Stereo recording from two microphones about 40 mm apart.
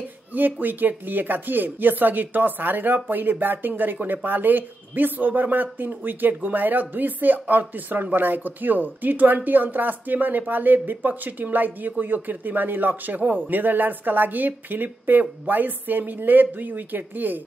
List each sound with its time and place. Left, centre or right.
0.3 s speech: right